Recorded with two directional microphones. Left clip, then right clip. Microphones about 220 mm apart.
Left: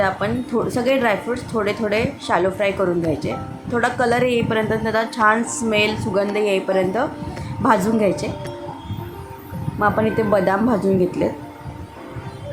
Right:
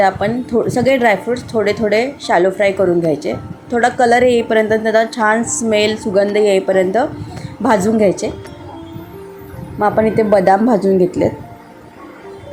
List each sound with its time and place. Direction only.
0.0 s speech: 15° right (ahead or behind)
9.7 s speech: 15° right (ahead or behind)